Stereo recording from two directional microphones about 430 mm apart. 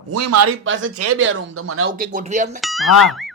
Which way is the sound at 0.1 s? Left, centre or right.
Right.